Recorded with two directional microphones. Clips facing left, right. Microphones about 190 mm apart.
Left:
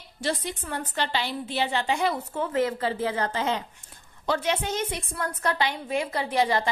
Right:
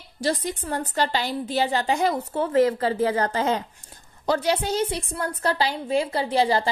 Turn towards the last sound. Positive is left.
turn(degrees=-30)  # may be behind; listen again after turning